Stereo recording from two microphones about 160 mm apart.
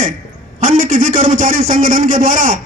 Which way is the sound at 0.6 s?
55° right (ahead or behind).